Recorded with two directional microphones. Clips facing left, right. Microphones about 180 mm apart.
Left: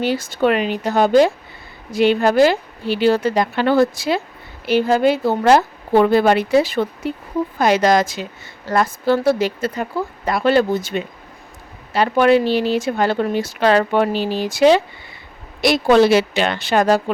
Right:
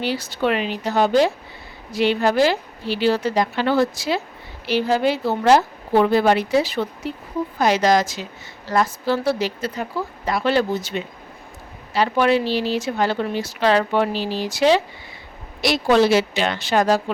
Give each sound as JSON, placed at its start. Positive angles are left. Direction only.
{"t": 0.0, "sound": "a woman's voice", "side_deg": 50}